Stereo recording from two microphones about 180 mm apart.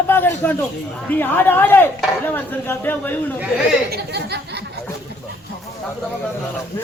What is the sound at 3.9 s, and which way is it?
Speech, 65° right (ahead or behind).